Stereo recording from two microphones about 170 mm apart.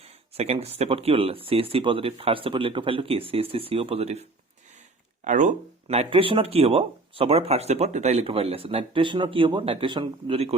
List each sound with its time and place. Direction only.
0.0 s speech: 35° right (ahead or behind)